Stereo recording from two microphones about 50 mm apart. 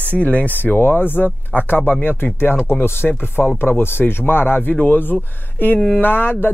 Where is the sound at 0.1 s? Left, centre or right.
Left.